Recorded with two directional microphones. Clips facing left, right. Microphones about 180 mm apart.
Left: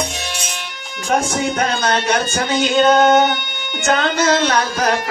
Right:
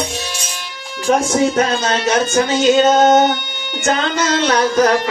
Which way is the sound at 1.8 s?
60° left (ahead or behind).